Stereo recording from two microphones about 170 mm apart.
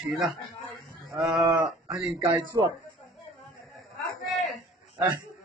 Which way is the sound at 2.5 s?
20° right (ahead or behind).